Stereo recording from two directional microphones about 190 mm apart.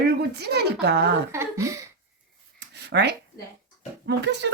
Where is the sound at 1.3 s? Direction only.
15° right (ahead or behind).